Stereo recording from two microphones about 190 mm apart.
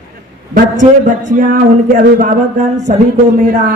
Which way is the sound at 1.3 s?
45° right (ahead or behind).